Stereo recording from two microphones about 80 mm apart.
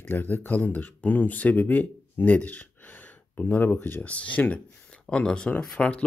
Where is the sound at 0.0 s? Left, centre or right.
Left.